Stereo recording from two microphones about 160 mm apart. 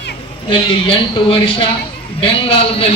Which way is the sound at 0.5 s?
35° left (ahead or behind).